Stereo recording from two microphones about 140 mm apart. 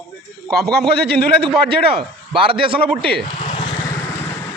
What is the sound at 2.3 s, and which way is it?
Speech, 40° right (ahead or behind).